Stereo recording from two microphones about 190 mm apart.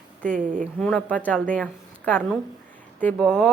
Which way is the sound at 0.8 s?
5° left (ahead or behind).